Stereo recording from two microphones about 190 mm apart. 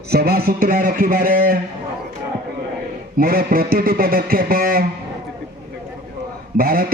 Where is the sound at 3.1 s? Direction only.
50° right (ahead or behind).